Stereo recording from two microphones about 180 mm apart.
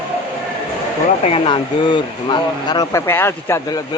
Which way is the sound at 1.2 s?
30° left (ahead or behind).